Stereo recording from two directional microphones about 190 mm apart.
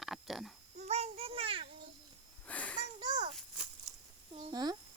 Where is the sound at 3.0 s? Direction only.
20° right (ahead or behind).